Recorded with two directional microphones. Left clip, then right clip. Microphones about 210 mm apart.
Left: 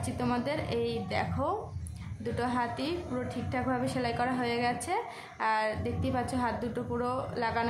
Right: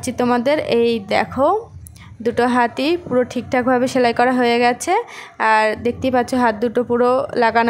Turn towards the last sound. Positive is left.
turn(degrees=-45)  # may be behind; listen again after turning